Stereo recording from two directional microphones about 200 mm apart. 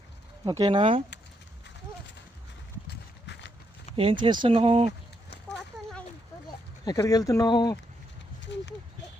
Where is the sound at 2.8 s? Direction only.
55° left (ahead or behind).